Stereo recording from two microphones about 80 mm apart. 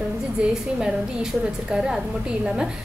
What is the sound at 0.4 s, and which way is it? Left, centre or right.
A woman's voice, centre.